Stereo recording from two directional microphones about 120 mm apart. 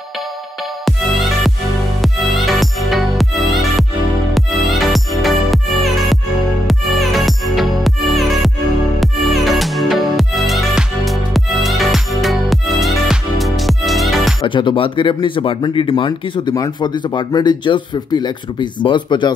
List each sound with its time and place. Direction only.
0.8 s music: centre (ahead or behind)
14.4 s speech: 45° left (ahead or behind)